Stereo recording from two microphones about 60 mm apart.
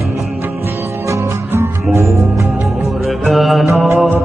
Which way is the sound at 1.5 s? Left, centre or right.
Right.